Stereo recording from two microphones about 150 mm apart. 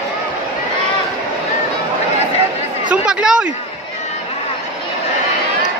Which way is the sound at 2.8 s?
5° right (ahead or behind).